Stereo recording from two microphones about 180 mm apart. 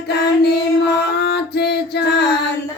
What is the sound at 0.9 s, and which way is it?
Music, 65° left (ahead or behind).